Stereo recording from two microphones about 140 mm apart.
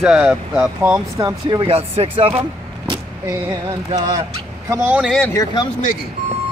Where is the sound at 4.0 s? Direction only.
25° right (ahead or behind).